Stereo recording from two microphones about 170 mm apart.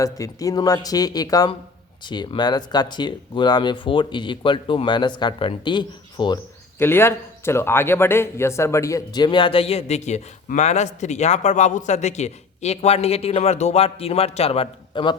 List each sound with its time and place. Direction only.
0.0 s speech: 20° left (ahead or behind)
6.7 s a man's voice: 15° left (ahead or behind); by 15.1 s 30° left (ahead or behind)